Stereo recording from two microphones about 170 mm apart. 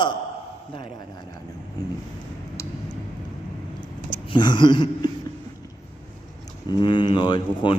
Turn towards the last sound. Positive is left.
turn(degrees=25)  # may be behind; listen again after turning